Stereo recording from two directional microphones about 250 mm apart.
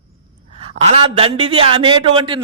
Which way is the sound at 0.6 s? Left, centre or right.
Right.